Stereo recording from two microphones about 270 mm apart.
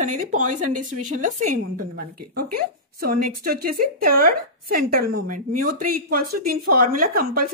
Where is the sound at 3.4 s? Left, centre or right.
Right.